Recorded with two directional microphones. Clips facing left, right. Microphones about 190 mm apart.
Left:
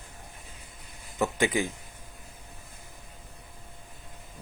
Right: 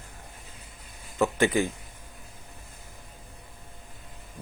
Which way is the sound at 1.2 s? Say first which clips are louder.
Right 3 dB; 15° left (ahead or behind).